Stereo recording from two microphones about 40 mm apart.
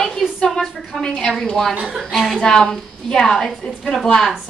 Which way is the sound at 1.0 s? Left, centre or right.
Left.